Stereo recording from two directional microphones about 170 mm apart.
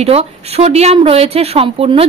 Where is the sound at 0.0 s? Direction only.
35° right (ahead or behind).